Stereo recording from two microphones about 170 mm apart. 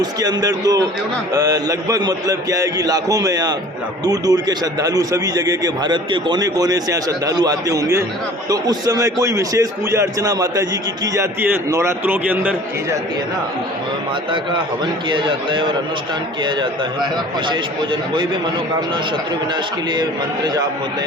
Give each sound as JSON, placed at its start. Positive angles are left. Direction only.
{"t": 0.0, "sound": "a man's voice", "side_deg": -20}
{"t": 15.1, "sound": "a man's voice", "side_deg": -30}
{"t": 19.9, "sound": "a man's voice", "side_deg": -25}